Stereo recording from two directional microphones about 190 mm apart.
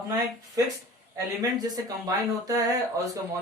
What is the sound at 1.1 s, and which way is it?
Speech, 20° right (ahead or behind).